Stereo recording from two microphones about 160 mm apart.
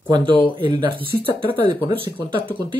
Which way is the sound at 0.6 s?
30° right (ahead or behind).